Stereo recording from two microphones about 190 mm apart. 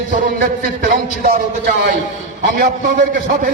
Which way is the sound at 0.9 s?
45° right (ahead or behind).